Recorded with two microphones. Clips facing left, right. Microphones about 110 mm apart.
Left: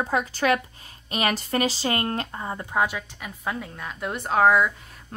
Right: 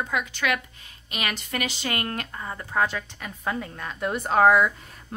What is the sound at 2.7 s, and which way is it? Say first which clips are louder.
A woman's voice: even; 10° left (ahead or behind).